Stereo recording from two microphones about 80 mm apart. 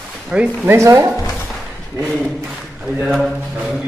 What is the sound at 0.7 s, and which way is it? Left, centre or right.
Speech, right.